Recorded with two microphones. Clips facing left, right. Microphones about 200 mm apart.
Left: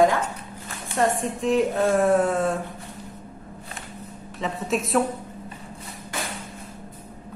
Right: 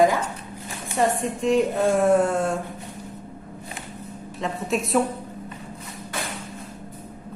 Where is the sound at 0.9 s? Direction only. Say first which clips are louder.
Even; centre (ahead or behind).